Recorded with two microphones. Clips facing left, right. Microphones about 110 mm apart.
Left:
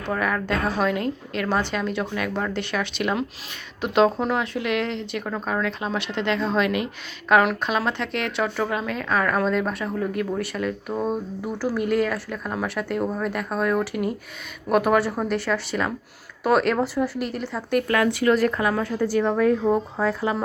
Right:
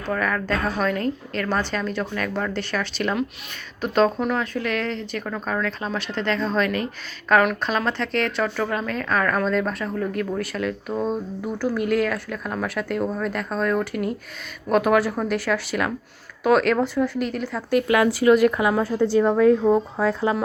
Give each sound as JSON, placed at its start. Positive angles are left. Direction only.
{"t": 0.0, "sound": "speech", "side_deg": 15}
{"t": 17.8, "sound": "a woman's voice", "side_deg": -15}
{"t": 18.8, "sound": "speech", "side_deg": -25}
{"t": 19.6, "sound": "a woman's voice", "side_deg": -5}